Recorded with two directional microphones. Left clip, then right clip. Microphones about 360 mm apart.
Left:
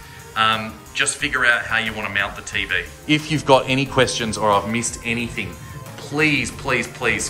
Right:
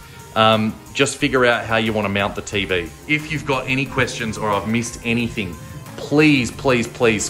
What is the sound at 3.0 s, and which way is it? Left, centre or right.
Speech, centre.